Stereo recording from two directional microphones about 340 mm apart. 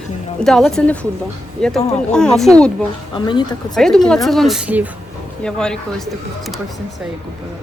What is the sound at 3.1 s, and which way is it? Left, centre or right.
Speech, centre.